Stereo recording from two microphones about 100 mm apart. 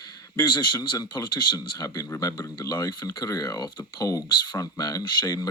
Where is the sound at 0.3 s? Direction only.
50° left (ahead or behind).